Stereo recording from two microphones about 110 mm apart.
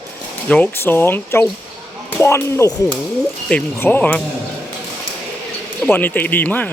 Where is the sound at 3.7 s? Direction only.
20° left (ahead or behind).